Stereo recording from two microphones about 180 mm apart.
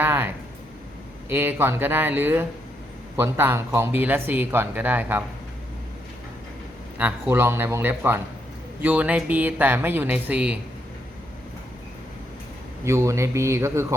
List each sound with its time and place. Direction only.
0.0 s a sound: 10° right (ahead or behind)
1.3 s speech: 15° right (ahead or behind)
7.0 s speech: 10° right (ahead or behind)
12.8 s speech: 15° right (ahead or behind)